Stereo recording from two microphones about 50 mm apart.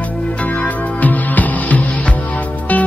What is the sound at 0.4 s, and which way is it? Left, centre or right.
Music, left.